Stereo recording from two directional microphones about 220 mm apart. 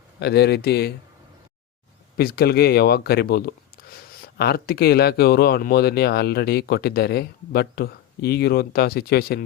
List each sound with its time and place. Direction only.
0.2 s speech: 50° left (ahead or behind)
2.1 s speech: 45° left (ahead or behind)